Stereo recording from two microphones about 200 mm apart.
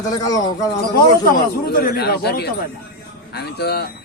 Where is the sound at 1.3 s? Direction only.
50° left (ahead or behind).